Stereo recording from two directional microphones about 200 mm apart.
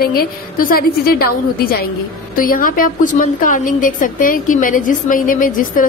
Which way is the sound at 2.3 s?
45° left (ahead or behind).